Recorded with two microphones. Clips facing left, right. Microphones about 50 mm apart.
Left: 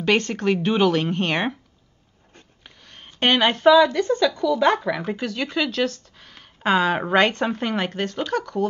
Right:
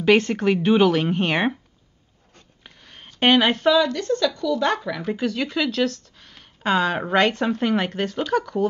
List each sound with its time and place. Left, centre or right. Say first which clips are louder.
0.0 s speech: right 3 dB; centre
2.6 s a sound: right 1 dB; centre
3.2 s speech: right 2 dB; centre
5.1 s speech: right 1 dB; centre